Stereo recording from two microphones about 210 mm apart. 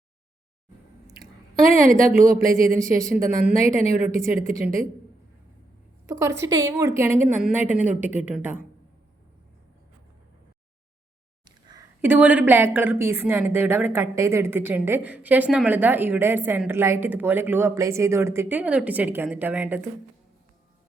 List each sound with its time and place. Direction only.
1.6 s a woman's voice: 40° right (ahead or behind)
2.7 s a woman's voice: 15° right (ahead or behind)
3.2 s a woman's voice: 40° right (ahead or behind)
6.1 s a woman's voice: 15° right (ahead or behind)
12.0 s a woman's voice: 10° right (ahead or behind)